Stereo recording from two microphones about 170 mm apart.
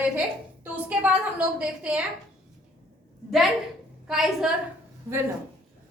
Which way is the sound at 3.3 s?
Centre (ahead or behind).